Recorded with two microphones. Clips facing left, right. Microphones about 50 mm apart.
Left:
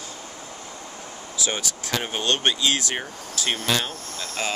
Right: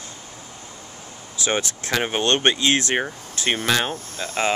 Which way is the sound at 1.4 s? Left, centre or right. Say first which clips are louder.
Right 5 dB; right.